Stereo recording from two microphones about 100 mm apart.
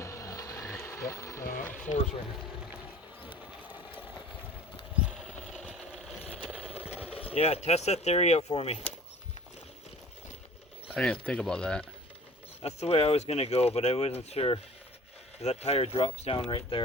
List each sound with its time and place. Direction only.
0.0 s vehicle: 30° left (ahead or behind)
4.9 s patter: 10° right (ahead or behind)
5.2 s sewing machine: centre (ahead or behind)
6.2 s a sound: 10° right (ahead or behind)
7.0 s speech: 75° left (ahead or behind); by 8.9 s 90° left
10.9 s speech: 10° left (ahead or behind)
12.6 s speech: 90° left; by 14.6 s 75° left (ahead or behind)
15.4 s speech: 90° left
16.2 s speech: 70° left (ahead or behind)